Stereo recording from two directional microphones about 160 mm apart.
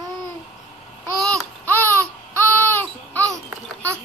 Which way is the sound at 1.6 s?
10° left (ahead or behind).